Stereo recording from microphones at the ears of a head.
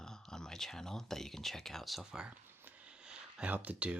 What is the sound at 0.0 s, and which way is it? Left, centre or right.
Speech, centre.